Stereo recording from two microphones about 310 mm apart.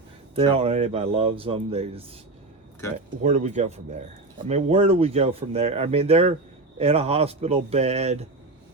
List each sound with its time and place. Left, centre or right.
0.3 s speech: centre
3.2 s speech: right